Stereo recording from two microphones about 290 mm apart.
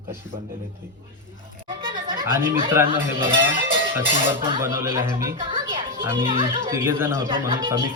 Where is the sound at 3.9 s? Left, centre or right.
Centre.